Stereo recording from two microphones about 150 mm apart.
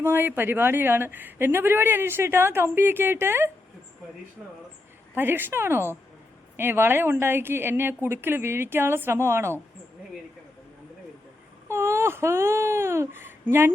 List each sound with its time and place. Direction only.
0.0 s speech: 15° right (ahead or behind)
5.1 s speech: 15° right (ahead or behind)
11.7 s speech: 15° right (ahead or behind)